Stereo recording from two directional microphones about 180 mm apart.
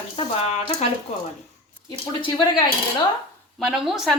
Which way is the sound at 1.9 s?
25° left (ahead or behind).